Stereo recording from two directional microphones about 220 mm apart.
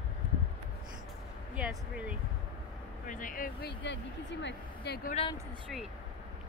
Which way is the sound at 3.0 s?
35° left (ahead or behind).